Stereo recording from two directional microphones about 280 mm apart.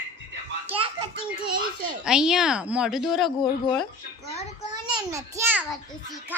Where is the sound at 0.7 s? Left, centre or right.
Centre.